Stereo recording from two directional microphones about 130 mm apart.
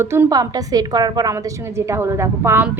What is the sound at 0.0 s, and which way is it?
A woman's voice, 20° right (ahead or behind).